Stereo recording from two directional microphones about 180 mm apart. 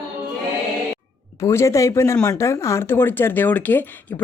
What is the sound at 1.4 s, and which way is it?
Speech, 15° left (ahead or behind).